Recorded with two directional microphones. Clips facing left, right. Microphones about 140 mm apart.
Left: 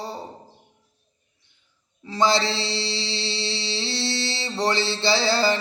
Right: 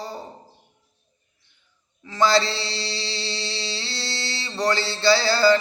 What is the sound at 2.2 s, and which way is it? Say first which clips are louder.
Mantra: right 1 dB; 20° left (ahead or behind).